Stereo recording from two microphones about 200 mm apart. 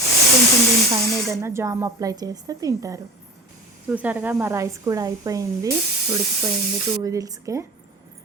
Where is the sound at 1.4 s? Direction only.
15° right (ahead or behind).